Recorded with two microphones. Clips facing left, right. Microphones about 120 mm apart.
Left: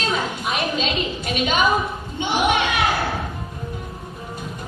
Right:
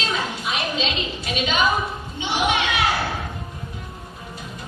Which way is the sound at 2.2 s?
50° left (ahead or behind).